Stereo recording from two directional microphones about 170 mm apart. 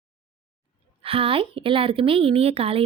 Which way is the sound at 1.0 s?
35° right (ahead or behind).